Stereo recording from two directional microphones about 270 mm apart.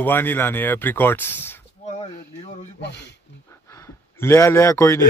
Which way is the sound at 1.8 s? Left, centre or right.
Left.